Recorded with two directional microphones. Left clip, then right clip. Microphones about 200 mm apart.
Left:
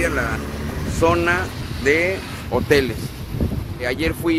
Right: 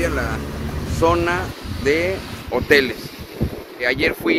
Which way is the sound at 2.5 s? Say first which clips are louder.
Right 2 dB; 10° left (ahead or behind).